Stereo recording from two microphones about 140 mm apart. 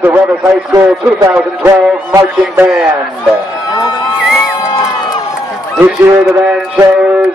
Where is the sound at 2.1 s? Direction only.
20° right (ahead or behind).